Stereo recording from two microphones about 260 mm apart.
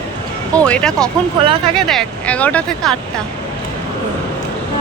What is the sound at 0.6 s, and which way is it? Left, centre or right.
Speech, centre.